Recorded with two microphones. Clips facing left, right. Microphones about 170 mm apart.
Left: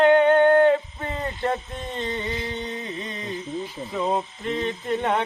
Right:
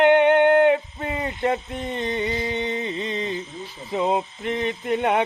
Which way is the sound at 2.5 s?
80° right.